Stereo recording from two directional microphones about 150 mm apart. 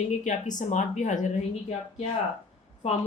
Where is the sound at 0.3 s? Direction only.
55° left (ahead or behind).